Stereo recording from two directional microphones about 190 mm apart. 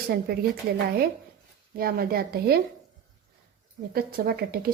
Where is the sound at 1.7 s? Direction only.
50° right (ahead or behind).